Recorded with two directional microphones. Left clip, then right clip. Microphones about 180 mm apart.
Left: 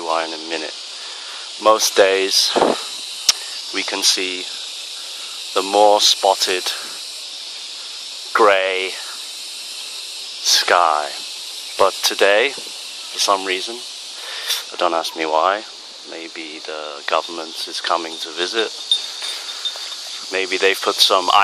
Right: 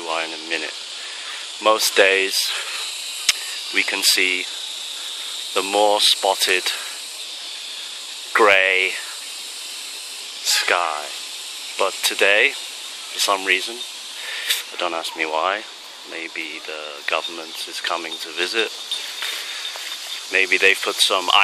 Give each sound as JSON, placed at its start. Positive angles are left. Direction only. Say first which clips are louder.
{"t": 0.0, "sound": "speech", "louder": "left 4 dB", "side_deg": 15}
{"t": 3.3, "sound": "a sound", "louder": "left 2 dB", "side_deg": 15}
{"t": 5.5, "sound": "speech", "louder": "left 4 dB", "side_deg": 10}
{"t": 8.3, "sound": "snake", "louder": "even", "side_deg": 10}
{"t": 10.4, "sound": "a sound", "louder": "left 5 dB", "side_deg": 15}
{"t": 11.8, "sound": "speech", "louder": "left 4 dB", "side_deg": 15}
{"t": 17.1, "sound": "speech", "louder": "left 3 dB", "side_deg": 20}
{"t": 20.3, "sound": "speech", "louder": "right 2 dB", "side_deg": 10}